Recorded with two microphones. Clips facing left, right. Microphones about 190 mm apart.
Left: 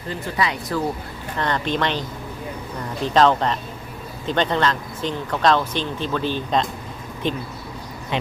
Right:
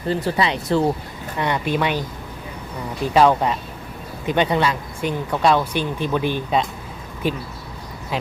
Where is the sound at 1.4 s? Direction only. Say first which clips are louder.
Right 1 dB; 10° right (ahead or behind).